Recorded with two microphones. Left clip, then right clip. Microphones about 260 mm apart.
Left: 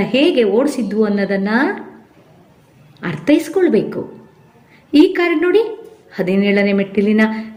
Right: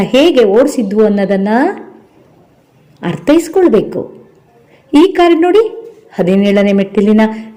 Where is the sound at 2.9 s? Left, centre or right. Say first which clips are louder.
Right 5 dB; right.